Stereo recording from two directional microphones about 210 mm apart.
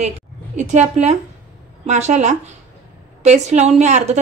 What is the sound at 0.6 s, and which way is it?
Speech, 35° right (ahead or behind).